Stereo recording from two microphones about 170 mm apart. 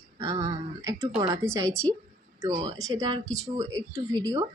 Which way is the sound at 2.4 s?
25° right (ahead or behind).